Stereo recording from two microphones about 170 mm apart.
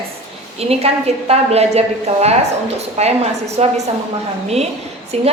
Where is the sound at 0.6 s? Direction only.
35° right (ahead or behind).